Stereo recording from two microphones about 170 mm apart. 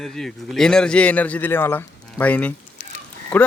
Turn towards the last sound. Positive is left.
turn(degrees=10)  # may be behind; listen again after turning